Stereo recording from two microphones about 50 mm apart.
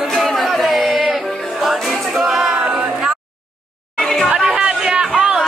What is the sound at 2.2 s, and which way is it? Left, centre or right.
A capella, centre.